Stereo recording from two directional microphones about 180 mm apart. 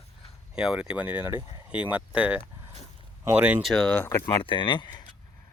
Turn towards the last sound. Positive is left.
turn(degrees=25)  # may be behind; listen again after turning